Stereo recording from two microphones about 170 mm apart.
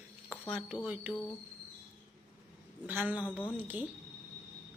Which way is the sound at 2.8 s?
10° right (ahead or behind).